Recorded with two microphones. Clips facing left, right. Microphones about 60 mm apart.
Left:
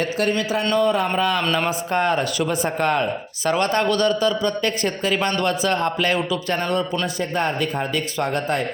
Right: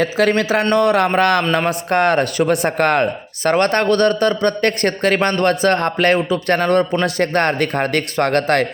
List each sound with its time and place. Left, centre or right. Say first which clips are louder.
0.3 s speech: right 5 dB; right
0.7 s speech: right 4 dB; right
1.9 s speech: right 6 dB; right
7.0 s a man's voice: right 6 dB; right